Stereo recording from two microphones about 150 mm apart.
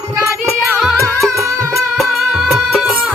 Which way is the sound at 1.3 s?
20° right (ahead or behind).